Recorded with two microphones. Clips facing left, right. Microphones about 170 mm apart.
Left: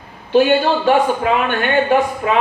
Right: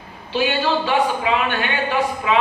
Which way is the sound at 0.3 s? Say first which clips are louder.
Left 7 dB; 50° left (ahead or behind).